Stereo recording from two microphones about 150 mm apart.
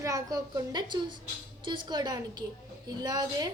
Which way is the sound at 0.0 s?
25° right (ahead or behind).